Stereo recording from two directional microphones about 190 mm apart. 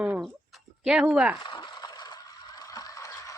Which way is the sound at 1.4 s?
25° left (ahead or behind).